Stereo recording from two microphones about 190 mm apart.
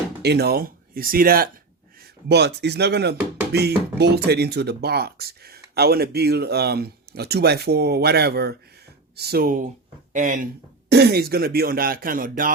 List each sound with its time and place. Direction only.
0.2 s speech: 60° right (ahead or behind)
2.3 s speech: 60° right (ahead or behind); by 10.5 s 40° right (ahead or behind)
10.8 s speech: 60° right (ahead or behind)